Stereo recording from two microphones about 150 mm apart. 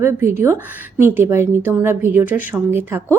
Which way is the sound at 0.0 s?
15° right (ahead or behind).